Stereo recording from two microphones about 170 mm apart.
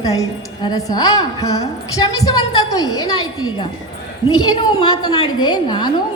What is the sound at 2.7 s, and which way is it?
Speech, 20° left (ahead or behind).